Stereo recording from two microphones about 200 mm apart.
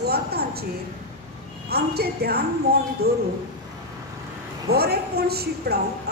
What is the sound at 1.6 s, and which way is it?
A woman's voice, 50° right (ahead or behind).